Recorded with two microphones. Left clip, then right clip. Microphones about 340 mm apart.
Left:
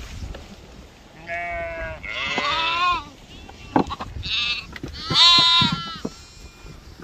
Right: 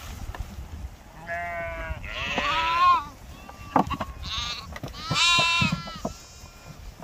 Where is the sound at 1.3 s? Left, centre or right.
Centre.